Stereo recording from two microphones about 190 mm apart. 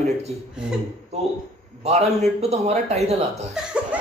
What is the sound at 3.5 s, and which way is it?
Laughter, 5° right (ahead or behind).